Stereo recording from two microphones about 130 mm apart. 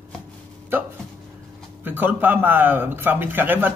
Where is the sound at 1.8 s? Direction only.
15° right (ahead or behind).